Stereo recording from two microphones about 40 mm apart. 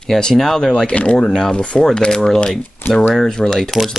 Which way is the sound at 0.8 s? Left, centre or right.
Left.